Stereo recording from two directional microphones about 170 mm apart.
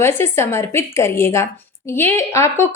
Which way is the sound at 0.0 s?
15° left (ahead or behind).